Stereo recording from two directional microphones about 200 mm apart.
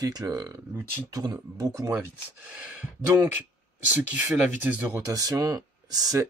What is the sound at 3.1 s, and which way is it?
Speech, 10° right (ahead or behind).